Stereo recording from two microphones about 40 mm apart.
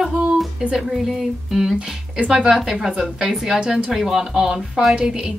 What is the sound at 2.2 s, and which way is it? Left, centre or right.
A woman's voice, centre.